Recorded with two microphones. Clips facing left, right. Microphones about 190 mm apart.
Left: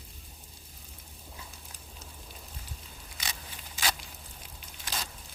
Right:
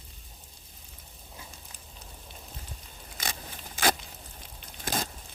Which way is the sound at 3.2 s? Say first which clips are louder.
Right 5 dB; 50° right (ahead or behind).